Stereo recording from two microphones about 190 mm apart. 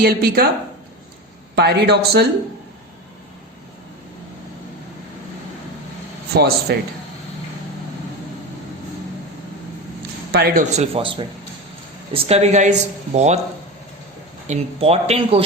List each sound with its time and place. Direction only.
0.0 s a woman's voice: 50° right (ahead or behind)
1.5 s a man's voice: 60° right (ahead or behind)
6.3 s a man's voice: 55° right (ahead or behind)
10.3 s speech: 50° right (ahead or behind)
14.4 s speech: 35° right (ahead or behind)